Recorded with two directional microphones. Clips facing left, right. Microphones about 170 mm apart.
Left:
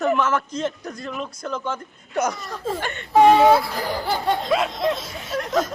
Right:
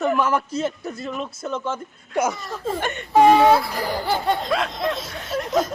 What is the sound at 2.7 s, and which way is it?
Speech, 20° right (ahead or behind).